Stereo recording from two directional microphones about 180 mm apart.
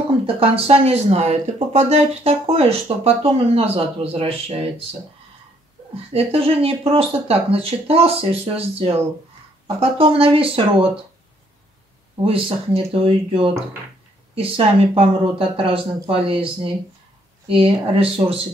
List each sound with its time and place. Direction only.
0.4 s speech: 35° right (ahead or behind)
6.1 s speech: 35° right (ahead or behind)
12.3 s speech: 30° right (ahead or behind)